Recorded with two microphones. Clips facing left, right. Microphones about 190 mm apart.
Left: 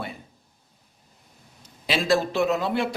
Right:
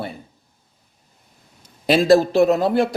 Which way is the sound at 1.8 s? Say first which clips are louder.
Right 9 dB; 40° right (ahead or behind).